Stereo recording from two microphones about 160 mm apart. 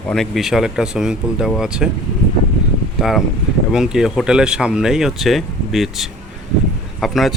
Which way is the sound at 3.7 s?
5° right (ahead or behind).